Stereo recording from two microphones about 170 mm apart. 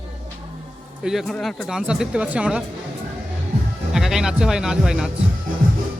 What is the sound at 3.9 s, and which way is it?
Speech, centre (ahead or behind).